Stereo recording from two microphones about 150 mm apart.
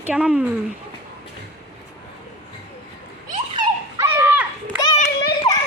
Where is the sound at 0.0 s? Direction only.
5° right (ahead or behind).